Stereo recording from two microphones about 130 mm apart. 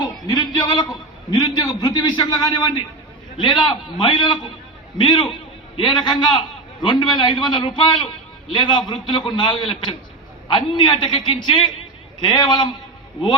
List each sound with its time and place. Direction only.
0.3 s a man's voice: 30° left (ahead or behind)